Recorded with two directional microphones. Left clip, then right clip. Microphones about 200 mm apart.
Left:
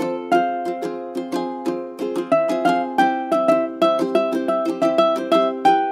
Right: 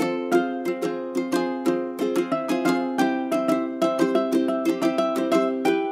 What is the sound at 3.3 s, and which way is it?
Music, 5° left (ahead or behind).